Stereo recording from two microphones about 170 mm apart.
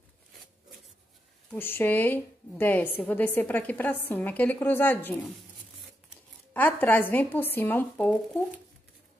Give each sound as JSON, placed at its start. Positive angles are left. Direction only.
{"t": 1.5, "sound": "speech", "side_deg": 10}
{"t": 6.5, "sound": "speech", "side_deg": 10}